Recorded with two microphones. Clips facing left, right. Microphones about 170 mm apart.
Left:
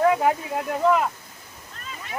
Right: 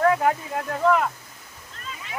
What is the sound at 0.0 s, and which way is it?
Speech, 15° left (ahead or behind).